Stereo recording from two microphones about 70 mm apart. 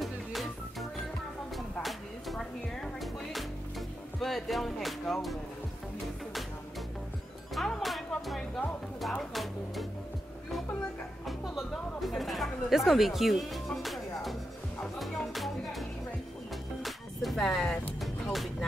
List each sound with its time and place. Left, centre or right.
0.0 s music: centre
4.2 s speech: centre
7.5 s music: centre
11.2 s music: centre